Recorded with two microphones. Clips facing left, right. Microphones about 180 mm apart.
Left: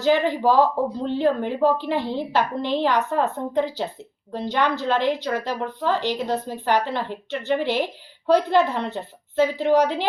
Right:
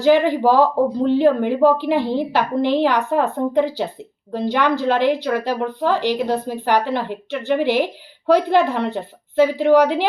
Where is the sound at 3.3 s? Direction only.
60° right (ahead or behind).